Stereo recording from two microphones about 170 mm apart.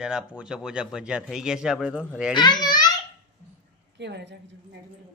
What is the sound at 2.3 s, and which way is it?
Speech, 25° left (ahead or behind).